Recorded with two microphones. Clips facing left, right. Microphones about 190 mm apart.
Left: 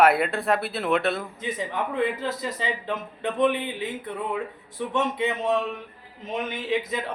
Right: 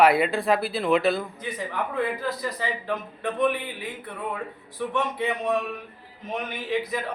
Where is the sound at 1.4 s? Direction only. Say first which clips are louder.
Left 1 dB; 20° left (ahead or behind).